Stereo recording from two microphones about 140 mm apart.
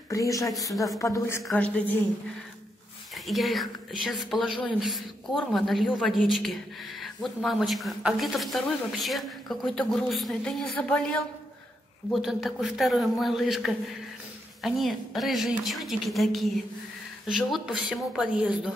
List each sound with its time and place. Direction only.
0.1 s a woman's voice: 25° left (ahead or behind)
3.3 s a woman's voice: centre (ahead or behind)